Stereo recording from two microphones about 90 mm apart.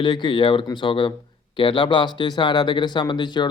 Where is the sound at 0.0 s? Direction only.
60° left (ahead or behind).